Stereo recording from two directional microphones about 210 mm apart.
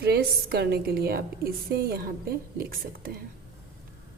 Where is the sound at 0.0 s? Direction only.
50° right (ahead or behind).